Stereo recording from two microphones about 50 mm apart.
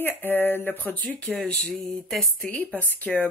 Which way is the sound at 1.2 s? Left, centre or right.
Left.